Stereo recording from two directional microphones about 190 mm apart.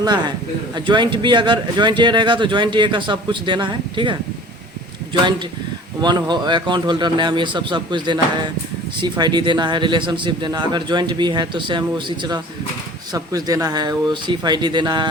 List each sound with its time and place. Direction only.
0.0 s speech: 20° right (ahead or behind)
6.0 s speech: 20° right (ahead or behind)